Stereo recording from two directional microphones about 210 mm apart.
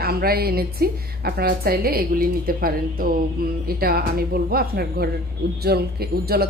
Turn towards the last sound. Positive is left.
turn(degrees=-50)  # may be behind; listen again after turning